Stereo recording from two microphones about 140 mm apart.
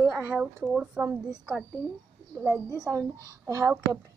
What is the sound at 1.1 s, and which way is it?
Speech, 20° right (ahead or behind).